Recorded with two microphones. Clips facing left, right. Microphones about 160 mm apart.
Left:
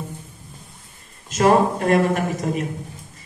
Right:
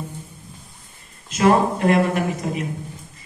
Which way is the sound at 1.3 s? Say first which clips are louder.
Left 1 dB; 45° left (ahead or behind).